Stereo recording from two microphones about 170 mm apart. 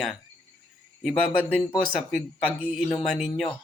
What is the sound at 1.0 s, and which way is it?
Speech, centre (ahead or behind).